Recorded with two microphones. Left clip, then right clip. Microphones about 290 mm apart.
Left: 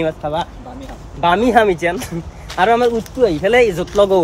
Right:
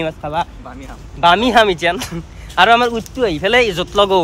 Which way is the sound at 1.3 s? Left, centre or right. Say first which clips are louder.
Even; centre.